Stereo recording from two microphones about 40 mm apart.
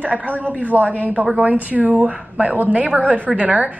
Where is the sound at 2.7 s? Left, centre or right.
Right.